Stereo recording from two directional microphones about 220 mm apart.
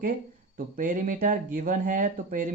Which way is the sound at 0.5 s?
40° right (ahead or behind).